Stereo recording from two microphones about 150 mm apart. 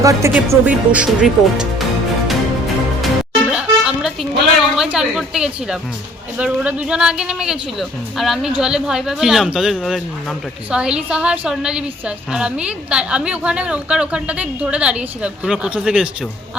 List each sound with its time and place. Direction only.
0.0 s speech: 20° right (ahead or behind)
0.3 s speech: 10° right (ahead or behind)
3.0 s music: 5° right (ahead or behind)
6.3 s speech: 10° right (ahead or behind)